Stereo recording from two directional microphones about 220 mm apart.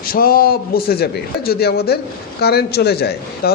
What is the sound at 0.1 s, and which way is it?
A man's voice, 40° left (ahead or behind).